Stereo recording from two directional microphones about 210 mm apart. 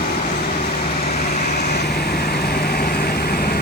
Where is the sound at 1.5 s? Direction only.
50° left (ahead or behind).